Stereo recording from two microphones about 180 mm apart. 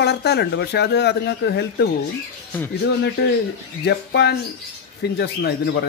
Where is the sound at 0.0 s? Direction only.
65° left (ahead or behind).